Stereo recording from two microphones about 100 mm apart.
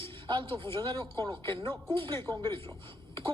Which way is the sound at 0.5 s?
25° left (ahead or behind).